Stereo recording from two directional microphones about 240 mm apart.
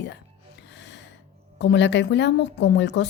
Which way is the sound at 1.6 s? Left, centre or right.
Left.